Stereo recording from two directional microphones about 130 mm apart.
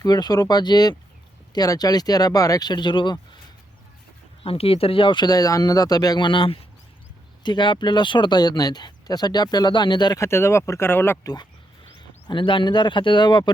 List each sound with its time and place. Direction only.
0.0 s speech: 30° left (ahead or behind)
4.4 s speech: 45° left (ahead or behind)
10.2 s speech: 20° left (ahead or behind)
11.9 s speech: 40° left (ahead or behind)